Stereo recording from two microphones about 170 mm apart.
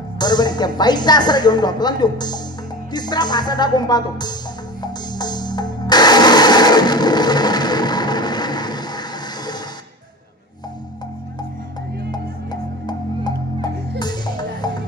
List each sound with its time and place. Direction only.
0.2 s a woman's voice: 25° left (ahead or behind)
4.8 s music: 25° left (ahead or behind)
12.8 s music: 25° left (ahead or behind)